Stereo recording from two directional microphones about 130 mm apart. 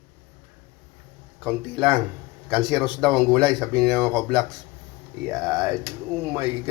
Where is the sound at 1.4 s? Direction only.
Centre (ahead or behind).